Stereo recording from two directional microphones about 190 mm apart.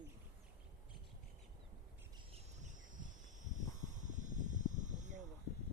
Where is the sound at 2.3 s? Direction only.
40° right (ahead or behind).